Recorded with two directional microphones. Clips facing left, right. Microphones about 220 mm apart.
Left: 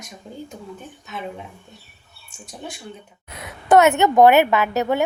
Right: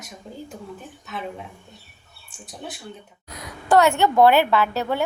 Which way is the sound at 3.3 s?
25° left (ahead or behind).